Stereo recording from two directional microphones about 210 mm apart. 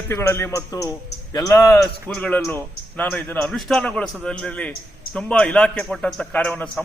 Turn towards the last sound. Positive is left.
turn(degrees=5)  # may be behind; listen again after turning